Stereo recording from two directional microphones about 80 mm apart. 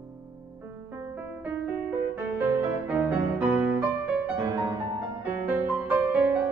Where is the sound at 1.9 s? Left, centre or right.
Right.